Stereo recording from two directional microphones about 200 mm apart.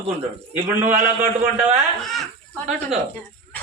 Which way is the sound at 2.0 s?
Centre (ahead or behind).